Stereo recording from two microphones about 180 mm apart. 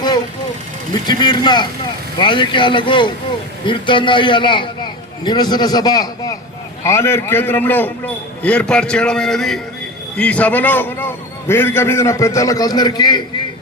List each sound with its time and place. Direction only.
1.0 s a man's voice: 25° left (ahead or behind)